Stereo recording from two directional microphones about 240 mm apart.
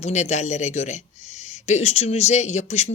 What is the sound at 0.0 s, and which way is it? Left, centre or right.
Speech, left.